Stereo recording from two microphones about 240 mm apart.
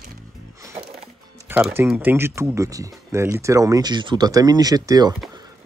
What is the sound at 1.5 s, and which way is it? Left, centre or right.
A man's voice, centre.